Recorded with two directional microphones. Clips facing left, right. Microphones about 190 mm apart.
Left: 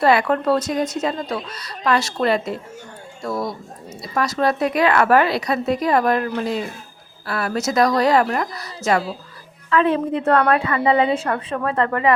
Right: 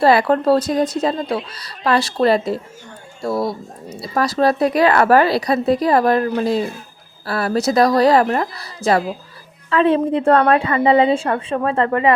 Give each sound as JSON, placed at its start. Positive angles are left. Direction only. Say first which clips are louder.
{"t": 0.0, "sound": "a woman's voice", "louder": "right 3 dB", "side_deg": -35}